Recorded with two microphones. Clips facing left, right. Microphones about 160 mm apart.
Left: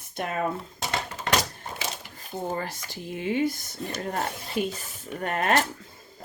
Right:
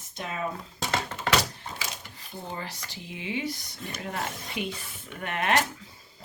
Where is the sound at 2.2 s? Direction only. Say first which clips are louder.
Left 7 dB; 50° left (ahead or behind).